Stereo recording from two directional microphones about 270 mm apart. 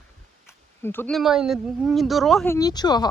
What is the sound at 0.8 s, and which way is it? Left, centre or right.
Speech, centre.